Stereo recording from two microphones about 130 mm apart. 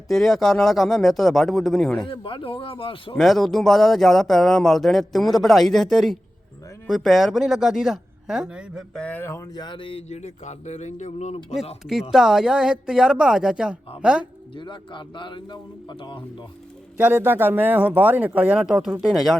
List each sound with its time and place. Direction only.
0.1 s speech: centre (ahead or behind)
2.0 s speech: 45° left (ahead or behind)
3.2 s speech: centre (ahead or behind)
8.9 s speech: 10° left (ahead or behind)
9.6 s speech: 40° left (ahead or behind); by 11.3 s 65° left (ahead or behind)
12.1 s a man's voice: 5° right (ahead or behind)
14.5 s a man's voice: 35° left (ahead or behind)
17.0 s a man's voice: 15° right (ahead or behind); by 19.4 s centre (ahead or behind)